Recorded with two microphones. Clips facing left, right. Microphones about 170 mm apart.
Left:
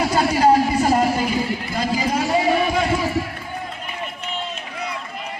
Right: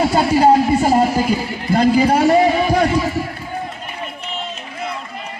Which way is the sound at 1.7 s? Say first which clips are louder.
Right 13 dB; 60° right (ahead or behind).